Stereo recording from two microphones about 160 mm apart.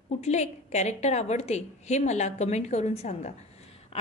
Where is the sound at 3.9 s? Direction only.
40° left (ahead or behind).